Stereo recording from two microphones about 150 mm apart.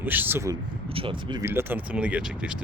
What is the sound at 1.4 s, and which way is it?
Speech, 15° right (ahead or behind).